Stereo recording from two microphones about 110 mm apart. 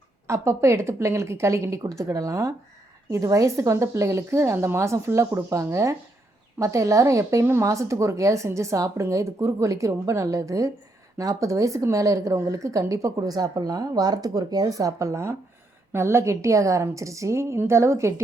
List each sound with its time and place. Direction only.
0.3 s a woman's voice: 25° right (ahead or behind)